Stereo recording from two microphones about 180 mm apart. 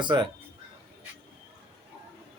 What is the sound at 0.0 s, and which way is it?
Speech, 25° right (ahead or behind).